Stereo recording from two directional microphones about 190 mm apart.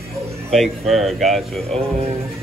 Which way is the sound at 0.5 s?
Centre (ahead or behind).